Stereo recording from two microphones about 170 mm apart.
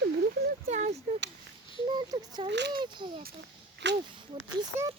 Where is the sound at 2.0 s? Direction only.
25° right (ahead or behind).